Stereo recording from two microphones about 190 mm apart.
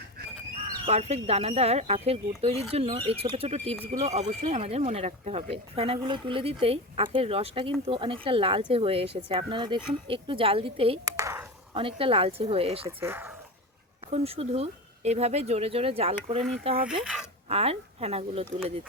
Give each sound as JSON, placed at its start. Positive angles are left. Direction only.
{"t": 0.9, "sound": "speech", "side_deg": -35}
{"t": 11.0, "sound": "a sound", "side_deg": -15}
{"t": 11.7, "sound": "speech", "side_deg": -30}
{"t": 13.0, "sound": "speech", "side_deg": -10}
{"t": 14.1, "sound": "speech", "side_deg": -30}
{"t": 17.0, "sound": "speech", "side_deg": -5}
{"t": 17.5, "sound": "speech", "side_deg": -30}